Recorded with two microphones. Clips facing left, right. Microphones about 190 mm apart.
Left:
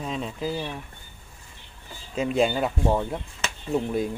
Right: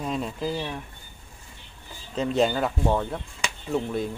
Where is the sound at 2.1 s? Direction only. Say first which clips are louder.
Even; 10° left (ahead or behind).